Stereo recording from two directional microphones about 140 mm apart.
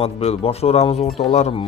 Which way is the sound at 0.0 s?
45° left (ahead or behind).